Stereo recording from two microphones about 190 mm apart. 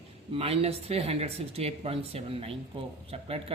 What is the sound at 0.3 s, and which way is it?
A man's voice, 30° right (ahead or behind).